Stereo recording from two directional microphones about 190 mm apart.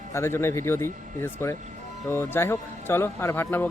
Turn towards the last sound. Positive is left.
turn(degrees=10)  # may be behind; listen again after turning